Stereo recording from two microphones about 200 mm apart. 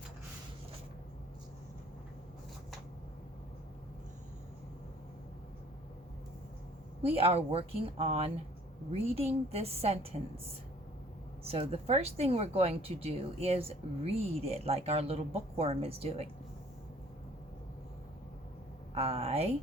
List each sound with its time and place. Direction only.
7.1 s speech: 30° right (ahead or behind)
11.4 s speech: 30° right (ahead or behind)
18.9 s speech: 30° right (ahead or behind)